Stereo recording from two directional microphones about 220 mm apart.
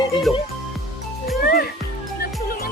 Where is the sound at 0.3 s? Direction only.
Centre (ahead or behind).